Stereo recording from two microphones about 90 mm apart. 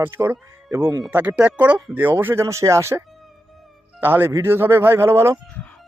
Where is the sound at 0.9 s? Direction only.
50° right (ahead or behind).